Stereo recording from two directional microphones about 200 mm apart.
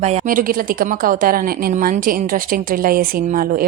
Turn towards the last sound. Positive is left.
turn(degrees=-45)  # may be behind; listen again after turning